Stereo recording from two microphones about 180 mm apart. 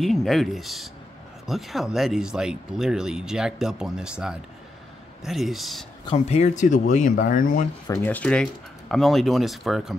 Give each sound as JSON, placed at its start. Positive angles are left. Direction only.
{"t": 0.0, "sound": "speech", "side_deg": 0}
{"t": 6.0, "sound": "speech", "side_deg": 35}
{"t": 7.9, "sound": "speech", "side_deg": 10}